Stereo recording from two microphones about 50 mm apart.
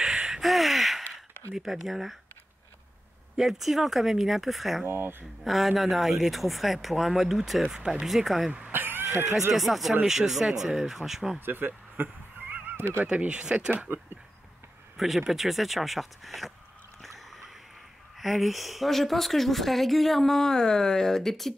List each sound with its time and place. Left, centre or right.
0.0 s a sound: centre
0.5 s gasp: centre
1.5 s speech: centre
3.3 s speech: centre
4.8 s speech: right
5.4 s speech: centre
8.7 s a sound: right
9.5 s speech: centre
11.3 s speech: right
13.0 s speech: right
15.0 s speech: centre
18.2 s speech: centre